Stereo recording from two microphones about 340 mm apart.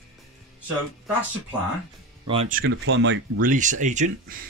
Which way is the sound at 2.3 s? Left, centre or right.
Right.